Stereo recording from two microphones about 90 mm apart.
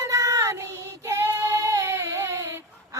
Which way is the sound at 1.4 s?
40° right (ahead or behind).